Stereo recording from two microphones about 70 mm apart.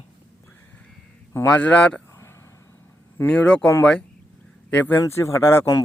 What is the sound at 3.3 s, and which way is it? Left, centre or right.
Speech, centre.